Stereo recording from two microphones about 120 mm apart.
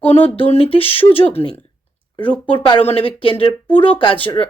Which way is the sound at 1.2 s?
15° left (ahead or behind).